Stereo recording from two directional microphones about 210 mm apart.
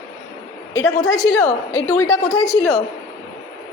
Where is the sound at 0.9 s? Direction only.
35° left (ahead or behind).